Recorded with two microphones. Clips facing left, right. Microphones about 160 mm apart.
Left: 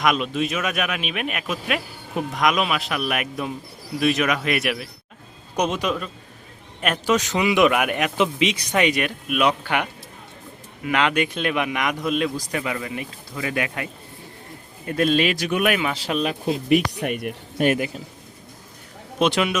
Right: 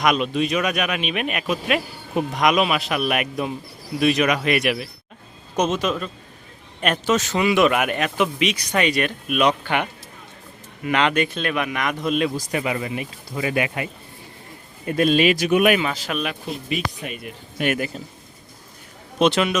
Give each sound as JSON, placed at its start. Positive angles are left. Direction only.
{"t": 0.0, "sound": "speech", "side_deg": 0}
{"t": 5.5, "sound": "speech", "side_deg": 15}
{"t": 8.2, "sound": "speech", "side_deg": 25}
{"t": 12.0, "sound": "speech", "side_deg": 0}
{"t": 12.5, "sound": "speech", "side_deg": -15}
{"t": 14.8, "sound": "speech", "side_deg": -15}
{"t": 16.0, "sound": "speech", "side_deg": 30}
{"t": 16.5, "sound": "speech", "side_deg": 70}
{"t": 17.7, "sound": "speech", "side_deg": 15}
{"t": 19.2, "sound": "speech", "side_deg": 10}